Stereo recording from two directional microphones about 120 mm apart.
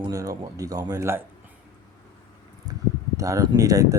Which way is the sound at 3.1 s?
25° right (ahead or behind).